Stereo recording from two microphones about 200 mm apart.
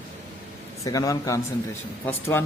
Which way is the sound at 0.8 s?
15° left (ahead or behind).